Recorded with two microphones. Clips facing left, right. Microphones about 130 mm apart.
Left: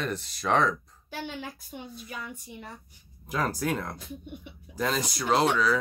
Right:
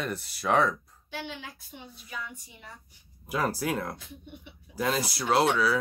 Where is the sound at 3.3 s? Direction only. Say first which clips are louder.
Even; 5° right (ahead or behind).